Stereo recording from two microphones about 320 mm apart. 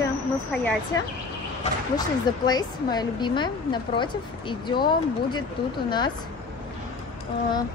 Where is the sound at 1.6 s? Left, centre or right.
Centre.